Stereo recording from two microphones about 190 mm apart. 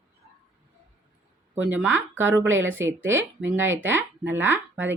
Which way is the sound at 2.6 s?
90° right.